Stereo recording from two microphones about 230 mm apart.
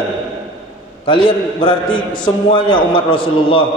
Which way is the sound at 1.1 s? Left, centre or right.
Left.